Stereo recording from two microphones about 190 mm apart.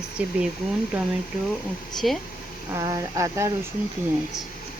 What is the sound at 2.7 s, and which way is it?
Speech, 15° right (ahead or behind).